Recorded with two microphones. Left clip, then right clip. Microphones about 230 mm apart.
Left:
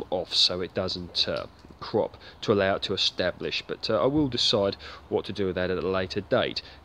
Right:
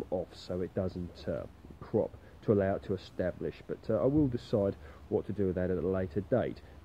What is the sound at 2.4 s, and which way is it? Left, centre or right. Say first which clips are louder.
Speech: left 6 dB; centre.